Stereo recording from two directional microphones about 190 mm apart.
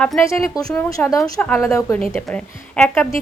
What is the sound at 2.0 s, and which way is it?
Speech, centre (ahead or behind).